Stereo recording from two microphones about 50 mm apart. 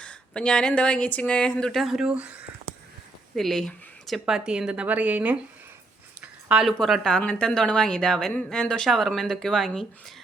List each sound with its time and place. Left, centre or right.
0.0 s speech: left
1.7 s speech: centre
2.0 s speech: right
3.3 s speech: centre
4.3 s speech: centre
4.7 s speech: right
6.2 s a sound: right
7.2 s speech: left; by 9.8 s centre